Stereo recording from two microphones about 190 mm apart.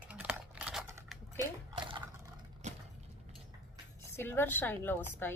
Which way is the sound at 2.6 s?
40° right (ahead or behind).